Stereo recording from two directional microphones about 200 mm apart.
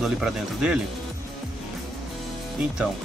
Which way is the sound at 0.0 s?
5° right (ahead or behind).